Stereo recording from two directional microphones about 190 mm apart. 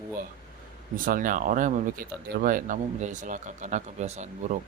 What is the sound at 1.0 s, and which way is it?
Speech, 45° right (ahead or behind).